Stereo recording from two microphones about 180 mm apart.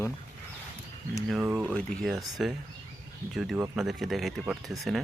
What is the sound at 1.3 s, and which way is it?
Speech, 5° right (ahead or behind).